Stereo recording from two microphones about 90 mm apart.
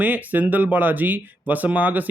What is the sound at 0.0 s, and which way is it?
Speech, 20° right (ahead or behind).